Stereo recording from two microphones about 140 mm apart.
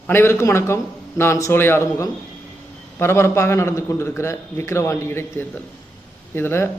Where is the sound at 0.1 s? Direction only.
15° left (ahead or behind).